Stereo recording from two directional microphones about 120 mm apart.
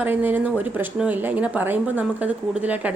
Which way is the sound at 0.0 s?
15° right (ahead or behind).